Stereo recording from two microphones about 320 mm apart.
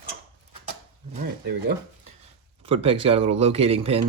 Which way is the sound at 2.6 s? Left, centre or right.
Centre.